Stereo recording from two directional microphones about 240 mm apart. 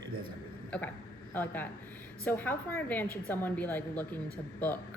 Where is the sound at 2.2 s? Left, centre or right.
Centre.